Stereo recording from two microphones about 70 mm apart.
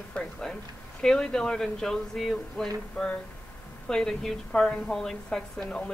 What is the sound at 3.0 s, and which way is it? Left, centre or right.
Speech, centre.